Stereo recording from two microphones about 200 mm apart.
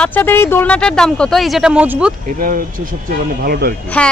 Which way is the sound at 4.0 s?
5° left (ahead or behind).